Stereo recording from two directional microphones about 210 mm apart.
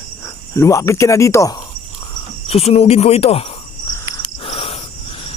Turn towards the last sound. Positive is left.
turn(degrees=25)  # may be behind; listen again after turning